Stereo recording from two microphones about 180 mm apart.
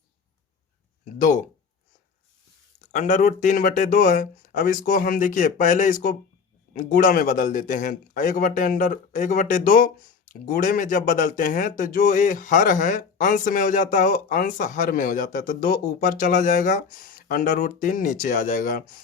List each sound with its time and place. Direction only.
1.2 s speech: 45° left (ahead or behind)
2.9 s speech: 40° left (ahead or behind)